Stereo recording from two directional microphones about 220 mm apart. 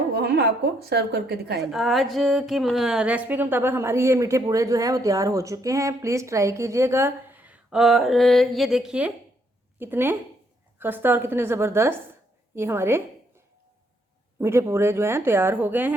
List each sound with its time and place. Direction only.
0.1 s a woman's voice: 50° right (ahead or behind)
1.7 s a woman's voice: centre (ahead or behind)
14.3 s a woman's voice: 10° right (ahead or behind)